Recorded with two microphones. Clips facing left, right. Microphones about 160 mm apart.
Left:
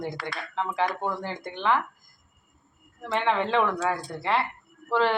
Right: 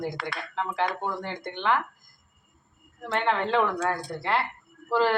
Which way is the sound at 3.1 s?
Centre (ahead or behind).